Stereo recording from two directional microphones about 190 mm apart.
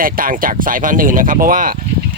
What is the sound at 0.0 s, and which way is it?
Speech, 50° right (ahead or behind).